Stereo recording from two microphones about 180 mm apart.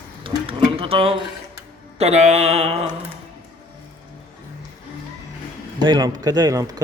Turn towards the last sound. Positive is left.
turn(degrees=-20)  # may be behind; listen again after turning